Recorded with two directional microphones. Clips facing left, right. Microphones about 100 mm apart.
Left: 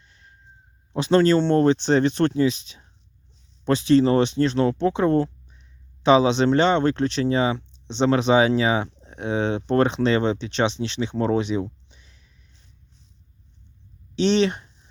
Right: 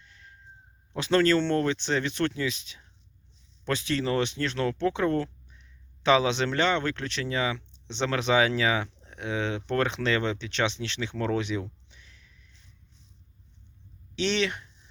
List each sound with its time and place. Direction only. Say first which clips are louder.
0.0 s a sound: right 1 dB; 25° left (ahead or behind)
0.9 s speech: left 5 dB; 25° left (ahead or behind)
14.2 s speech: left 8 dB; 25° left (ahead or behind)